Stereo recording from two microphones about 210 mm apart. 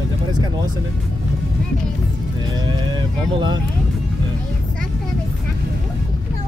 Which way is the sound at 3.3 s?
20° right (ahead or behind).